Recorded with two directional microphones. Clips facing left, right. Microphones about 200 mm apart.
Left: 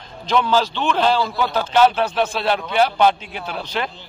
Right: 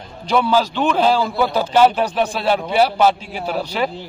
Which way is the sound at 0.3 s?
10° right (ahead or behind).